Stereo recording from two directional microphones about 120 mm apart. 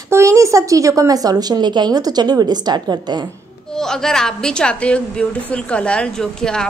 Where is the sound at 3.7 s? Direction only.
5° left (ahead or behind).